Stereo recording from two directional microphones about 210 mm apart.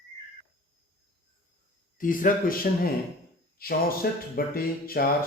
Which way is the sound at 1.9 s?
40° left (ahead or behind).